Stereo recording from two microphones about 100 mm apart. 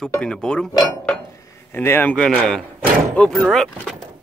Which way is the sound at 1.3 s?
30° left (ahead or behind).